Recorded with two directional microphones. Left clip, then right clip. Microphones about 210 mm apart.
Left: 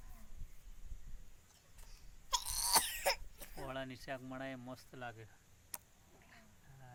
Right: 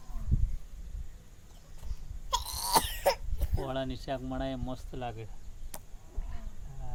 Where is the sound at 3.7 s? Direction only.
5° left (ahead or behind).